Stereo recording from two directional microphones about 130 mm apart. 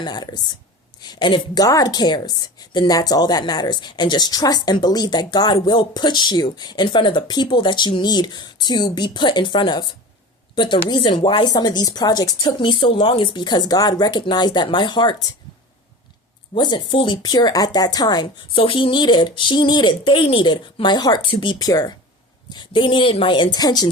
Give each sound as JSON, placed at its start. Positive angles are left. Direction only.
{"t": 0.0, "sound": "a woman's voice", "side_deg": 35}
{"t": 16.6, "sound": "a woman's voice", "side_deg": 35}